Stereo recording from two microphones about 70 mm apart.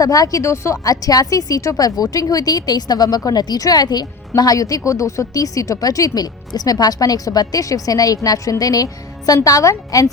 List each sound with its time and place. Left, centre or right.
0.0 s a woman's voice: left